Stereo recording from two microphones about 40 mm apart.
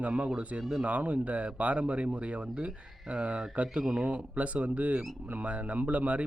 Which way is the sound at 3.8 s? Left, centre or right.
Centre.